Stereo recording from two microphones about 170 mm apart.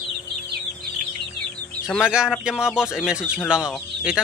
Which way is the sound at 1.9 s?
5° right (ahead or behind).